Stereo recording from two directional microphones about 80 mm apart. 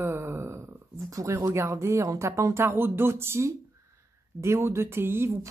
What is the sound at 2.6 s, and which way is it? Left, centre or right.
Speech, right.